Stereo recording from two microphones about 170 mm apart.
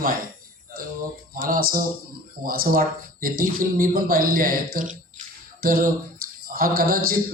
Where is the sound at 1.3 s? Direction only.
55° right (ahead or behind).